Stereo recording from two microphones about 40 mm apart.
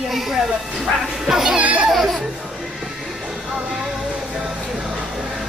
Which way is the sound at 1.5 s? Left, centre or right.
Right.